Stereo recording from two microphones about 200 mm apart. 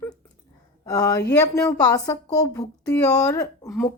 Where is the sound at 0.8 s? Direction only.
20° left (ahead or behind).